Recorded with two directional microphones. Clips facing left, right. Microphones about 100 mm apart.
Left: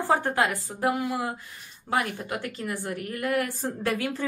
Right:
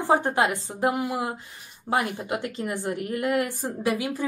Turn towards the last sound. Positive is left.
turn(degrees=-15)  # may be behind; listen again after turning